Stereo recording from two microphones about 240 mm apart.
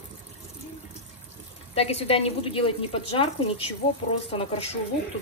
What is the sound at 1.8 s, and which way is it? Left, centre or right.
Speech, left.